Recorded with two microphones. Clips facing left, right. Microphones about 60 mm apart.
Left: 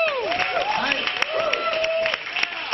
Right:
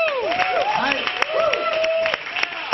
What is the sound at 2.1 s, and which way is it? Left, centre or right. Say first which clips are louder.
Applause: right 2 dB; centre.